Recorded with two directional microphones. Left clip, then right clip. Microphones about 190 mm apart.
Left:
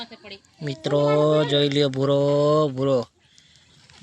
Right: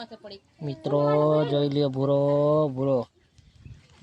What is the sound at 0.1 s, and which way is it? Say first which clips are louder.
Speech: left 2 dB; 20° right (ahead or behind).